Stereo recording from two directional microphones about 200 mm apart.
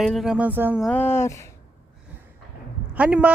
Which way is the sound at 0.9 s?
10° left (ahead or behind).